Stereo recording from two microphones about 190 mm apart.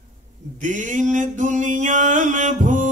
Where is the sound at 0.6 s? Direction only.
40° right (ahead or behind).